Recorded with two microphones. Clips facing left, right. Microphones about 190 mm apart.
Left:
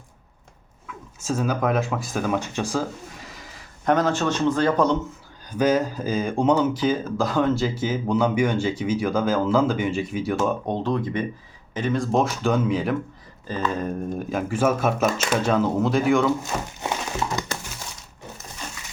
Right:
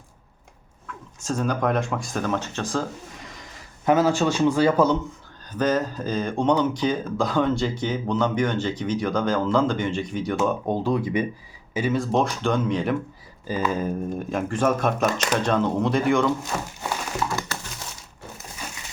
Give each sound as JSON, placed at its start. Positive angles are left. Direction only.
{"t": 0.9, "sound": "speech", "side_deg": 5}
{"t": 5.5, "sound": "speech", "side_deg": 10}
{"t": 10.3, "sound": "speech", "side_deg": -5}
{"t": 13.5, "sound": "speech", "side_deg": -10}
{"t": 17.2, "sound": "crumpling", "side_deg": 20}